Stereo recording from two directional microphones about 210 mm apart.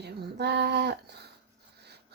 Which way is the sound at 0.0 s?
50° right (ahead or behind).